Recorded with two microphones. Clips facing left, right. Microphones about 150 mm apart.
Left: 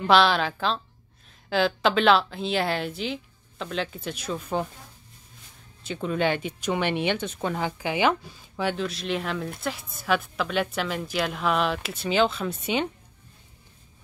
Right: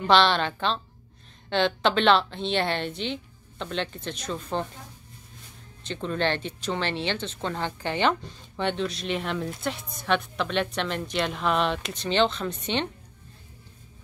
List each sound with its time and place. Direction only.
0.0 s a woman's voice: 5° left (ahead or behind)
5.9 s a woman's voice: 5° left (ahead or behind)